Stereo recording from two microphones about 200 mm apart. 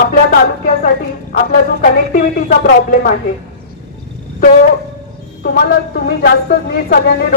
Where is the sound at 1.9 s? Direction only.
45° left (ahead or behind).